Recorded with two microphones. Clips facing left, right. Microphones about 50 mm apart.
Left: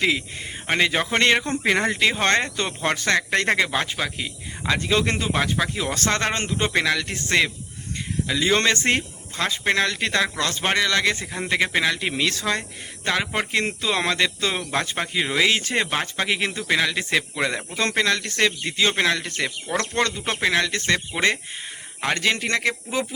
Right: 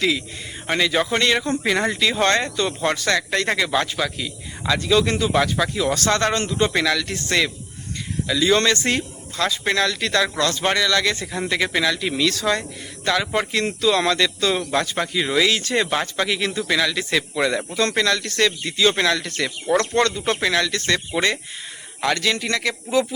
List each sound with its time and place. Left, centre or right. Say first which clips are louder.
0.7 s speech: right 1 dB; left
3.7 s speech: right 3 dB; left
5.5 s speech: right 4 dB; left
22.0 s speech: right 1 dB; left